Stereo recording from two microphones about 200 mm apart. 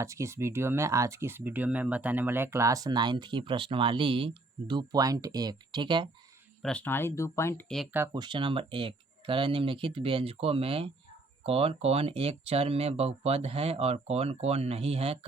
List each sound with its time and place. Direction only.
0.0 s speech: 15° right (ahead or behind)
6.6 s speech: 5° left (ahead or behind)
7.9 s speech: 15° right (ahead or behind)